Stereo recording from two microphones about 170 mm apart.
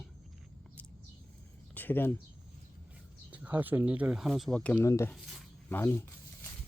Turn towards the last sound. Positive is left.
turn(degrees=15)  # may be behind; listen again after turning